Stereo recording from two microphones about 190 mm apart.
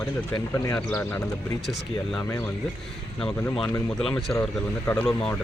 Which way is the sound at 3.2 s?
5° left (ahead or behind).